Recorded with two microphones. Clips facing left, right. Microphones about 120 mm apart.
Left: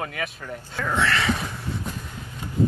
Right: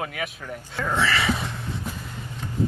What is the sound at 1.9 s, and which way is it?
Vehicle, 5° right (ahead or behind).